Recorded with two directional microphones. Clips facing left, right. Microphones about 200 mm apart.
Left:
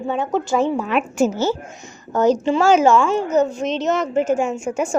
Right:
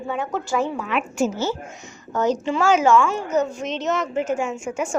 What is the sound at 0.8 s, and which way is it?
A woman's voice, 40° left (ahead or behind).